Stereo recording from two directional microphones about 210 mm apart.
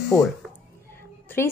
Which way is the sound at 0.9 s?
10° left (ahead or behind).